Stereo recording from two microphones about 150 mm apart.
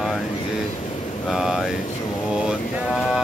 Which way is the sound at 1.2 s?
Centre (ahead or behind).